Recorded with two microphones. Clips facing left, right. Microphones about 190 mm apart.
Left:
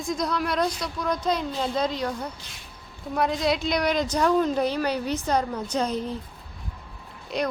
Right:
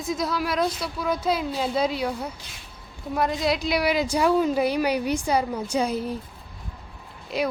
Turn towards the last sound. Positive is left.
turn(degrees=-5)  # may be behind; listen again after turning